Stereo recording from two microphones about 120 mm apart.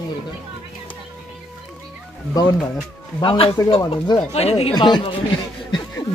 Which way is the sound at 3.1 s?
45° left (ahead or behind).